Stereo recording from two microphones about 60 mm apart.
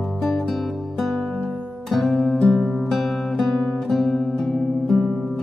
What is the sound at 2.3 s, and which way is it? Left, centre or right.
Music, centre.